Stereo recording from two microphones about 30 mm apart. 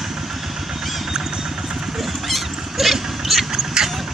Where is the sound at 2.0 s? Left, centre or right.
Centre.